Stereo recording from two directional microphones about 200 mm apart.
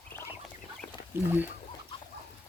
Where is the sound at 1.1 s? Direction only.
10° right (ahead or behind).